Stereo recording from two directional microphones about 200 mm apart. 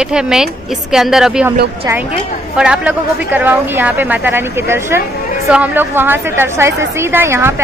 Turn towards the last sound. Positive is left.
turn(degrees=-10)  # may be behind; listen again after turning